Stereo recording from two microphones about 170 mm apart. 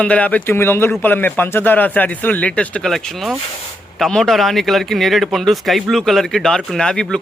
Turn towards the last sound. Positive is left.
turn(degrees=5)  # may be behind; listen again after turning